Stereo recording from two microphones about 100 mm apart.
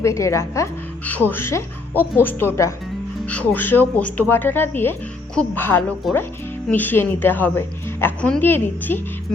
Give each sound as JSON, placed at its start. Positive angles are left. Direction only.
{"t": 0.0, "sound": "speech", "side_deg": 30}
{"t": 1.0, "sound": "speech", "side_deg": 15}
{"t": 3.2, "sound": "speech", "side_deg": 15}
{"t": 6.0, "sound": "speech", "side_deg": 0}
{"t": 6.7, "sound": "speech", "side_deg": 20}